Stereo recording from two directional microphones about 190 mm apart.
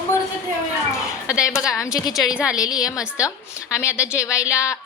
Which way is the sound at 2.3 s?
5° right (ahead or behind).